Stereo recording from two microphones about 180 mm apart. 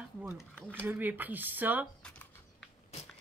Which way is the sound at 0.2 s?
5° right (ahead or behind).